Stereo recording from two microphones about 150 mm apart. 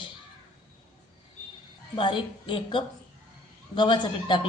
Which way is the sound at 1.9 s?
30° left (ahead or behind).